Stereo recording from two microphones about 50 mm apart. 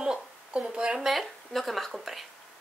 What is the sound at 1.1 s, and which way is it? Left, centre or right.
Speech, centre.